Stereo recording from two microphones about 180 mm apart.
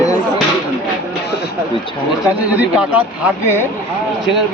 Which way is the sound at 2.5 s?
10° right (ahead or behind).